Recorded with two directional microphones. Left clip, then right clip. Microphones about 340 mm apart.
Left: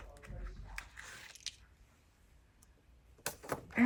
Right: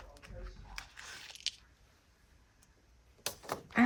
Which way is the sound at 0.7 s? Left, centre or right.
Centre.